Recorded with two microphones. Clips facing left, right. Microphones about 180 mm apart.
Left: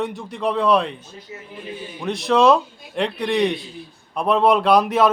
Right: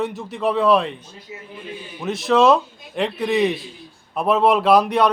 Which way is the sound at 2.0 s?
Centre (ahead or behind).